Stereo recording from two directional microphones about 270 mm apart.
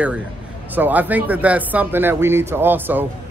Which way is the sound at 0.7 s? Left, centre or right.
Centre.